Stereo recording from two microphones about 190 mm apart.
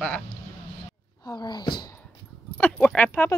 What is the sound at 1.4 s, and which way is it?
Speech, 25° left (ahead or behind).